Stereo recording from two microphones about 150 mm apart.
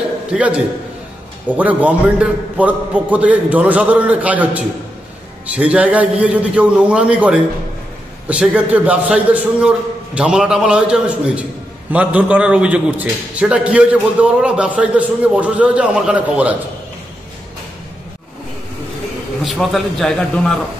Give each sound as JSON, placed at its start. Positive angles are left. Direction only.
{"t": 0.3, "sound": "a man's voice", "side_deg": -10}
{"t": 19.4, "sound": "a man's voice", "side_deg": 0}